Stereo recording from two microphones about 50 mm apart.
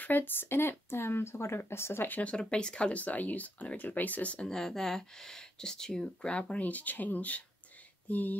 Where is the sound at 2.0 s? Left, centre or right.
Left.